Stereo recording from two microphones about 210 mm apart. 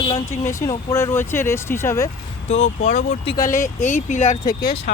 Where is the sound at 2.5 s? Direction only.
30° left (ahead or behind).